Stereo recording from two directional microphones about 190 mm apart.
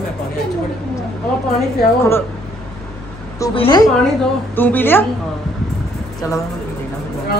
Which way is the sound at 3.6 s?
20° left (ahead or behind).